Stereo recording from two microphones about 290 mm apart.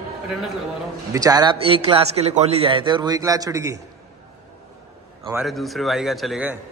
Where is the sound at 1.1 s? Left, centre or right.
Centre.